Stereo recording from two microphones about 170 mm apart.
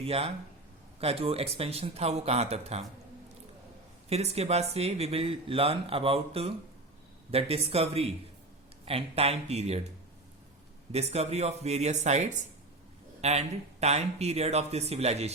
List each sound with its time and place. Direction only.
0.0 s speech: 35° right (ahead or behind)
4.1 s speech: 40° right (ahead or behind)
10.9 s speech: 40° right (ahead or behind)